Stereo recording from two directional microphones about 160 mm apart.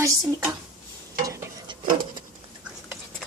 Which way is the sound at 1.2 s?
20° right (ahead or behind).